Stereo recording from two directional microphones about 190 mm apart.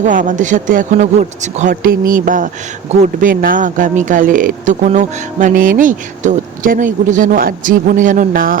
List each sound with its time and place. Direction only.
0.0 s speech: 45° right (ahead or behind)